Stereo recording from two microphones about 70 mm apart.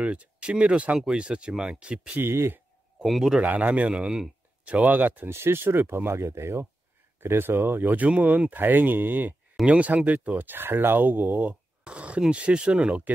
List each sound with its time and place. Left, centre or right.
0.0 s speech: centre
2.1 s speech: right
3.0 s a man's voice: centre
3.3 s speech: right
5.3 s speech: right; by 13.1 s centre